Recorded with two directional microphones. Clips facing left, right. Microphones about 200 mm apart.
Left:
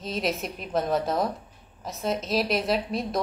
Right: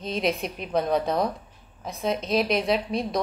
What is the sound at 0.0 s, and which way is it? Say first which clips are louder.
Speech: right 2 dB; centre (ahead or behind).